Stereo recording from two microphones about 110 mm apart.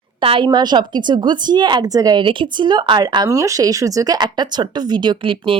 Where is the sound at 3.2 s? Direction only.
30° right (ahead or behind).